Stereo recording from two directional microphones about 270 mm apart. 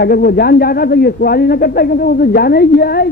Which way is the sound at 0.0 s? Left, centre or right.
Left.